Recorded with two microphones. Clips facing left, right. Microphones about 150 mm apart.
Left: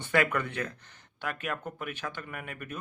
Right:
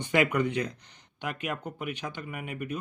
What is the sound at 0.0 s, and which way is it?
Speech, 15° right (ahead or behind).